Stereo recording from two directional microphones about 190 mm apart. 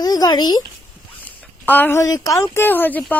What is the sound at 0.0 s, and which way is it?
Speech, 20° left (ahead or behind).